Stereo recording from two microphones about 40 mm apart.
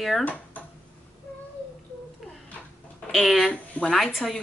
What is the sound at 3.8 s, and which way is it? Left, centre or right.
Speech, left.